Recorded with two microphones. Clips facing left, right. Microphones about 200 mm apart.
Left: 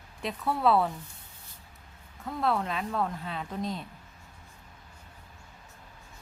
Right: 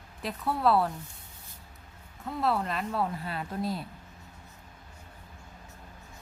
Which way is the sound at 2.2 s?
Centre (ahead or behind).